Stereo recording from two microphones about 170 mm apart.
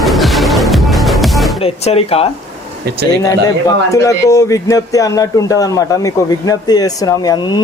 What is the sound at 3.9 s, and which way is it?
Speech, 20° left (ahead or behind).